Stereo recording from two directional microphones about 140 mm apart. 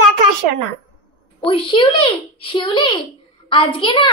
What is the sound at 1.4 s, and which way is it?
A child's voice, 40° left (ahead or behind).